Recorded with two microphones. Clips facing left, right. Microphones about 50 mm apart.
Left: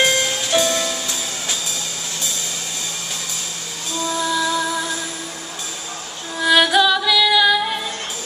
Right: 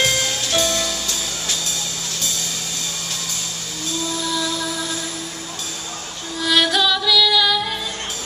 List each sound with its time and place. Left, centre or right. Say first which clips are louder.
0.0 s music: left 2 dB; centre
3.9 s music: left 3 dB; centre
6.4 s music: left 3 dB; centre